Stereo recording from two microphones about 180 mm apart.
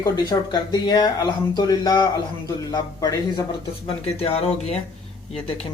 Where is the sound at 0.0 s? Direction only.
20° left (ahead or behind).